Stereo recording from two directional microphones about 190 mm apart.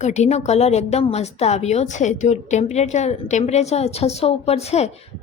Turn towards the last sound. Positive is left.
turn(degrees=35)  # may be behind; listen again after turning